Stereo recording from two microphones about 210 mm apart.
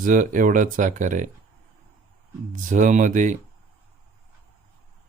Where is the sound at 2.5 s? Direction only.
40° right (ahead or behind).